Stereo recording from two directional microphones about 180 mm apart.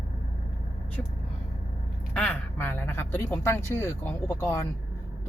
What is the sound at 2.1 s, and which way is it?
Speech, 10° left (ahead or behind).